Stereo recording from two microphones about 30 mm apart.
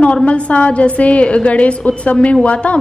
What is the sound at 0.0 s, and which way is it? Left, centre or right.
A woman's voice, left.